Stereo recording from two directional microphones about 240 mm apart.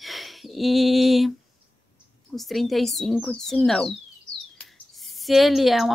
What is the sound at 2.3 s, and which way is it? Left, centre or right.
Speech, centre.